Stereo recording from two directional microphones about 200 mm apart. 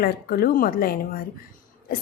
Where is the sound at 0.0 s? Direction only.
50° left (ahead or behind).